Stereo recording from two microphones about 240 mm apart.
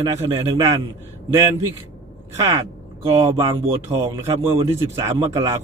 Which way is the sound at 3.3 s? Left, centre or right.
Centre.